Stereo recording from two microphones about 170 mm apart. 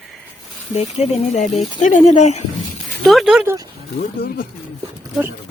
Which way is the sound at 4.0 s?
65° left (ahead or behind).